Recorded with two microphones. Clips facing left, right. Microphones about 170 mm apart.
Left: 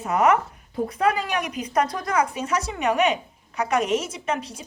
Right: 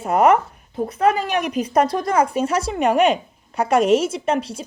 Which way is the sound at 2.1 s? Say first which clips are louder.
Right 4 dB; 30° right (ahead or behind).